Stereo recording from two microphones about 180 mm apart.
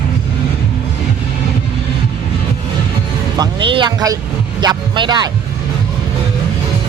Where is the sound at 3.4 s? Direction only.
25° right (ahead or behind).